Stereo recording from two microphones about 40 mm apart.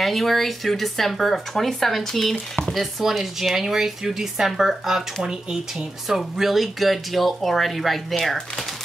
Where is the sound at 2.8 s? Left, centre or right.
Centre.